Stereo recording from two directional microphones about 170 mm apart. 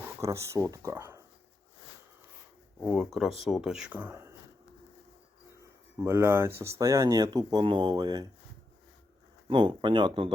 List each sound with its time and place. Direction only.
0.2 s speech: 15° right (ahead or behind)
2.8 s speech: centre (ahead or behind)
6.0 s speech: 15° right (ahead or behind)
9.5 s speech: 30° right (ahead or behind)